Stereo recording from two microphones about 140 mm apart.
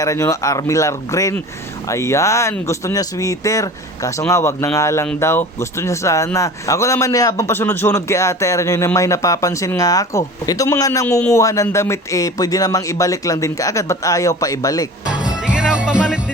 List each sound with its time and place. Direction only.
0.0 s speech: 20° left (ahead or behind)
11.0 s a man's voice: 15° left (ahead or behind)
11.3 s speech: 25° left (ahead or behind)
15.3 s music: 5° right (ahead or behind)